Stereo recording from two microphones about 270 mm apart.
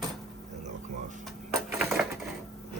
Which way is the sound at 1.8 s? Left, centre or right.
Centre.